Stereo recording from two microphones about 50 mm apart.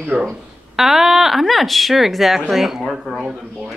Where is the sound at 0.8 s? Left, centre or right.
Centre.